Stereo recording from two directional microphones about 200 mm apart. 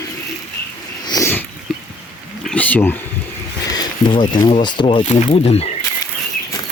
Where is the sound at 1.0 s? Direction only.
15° left (ahead or behind).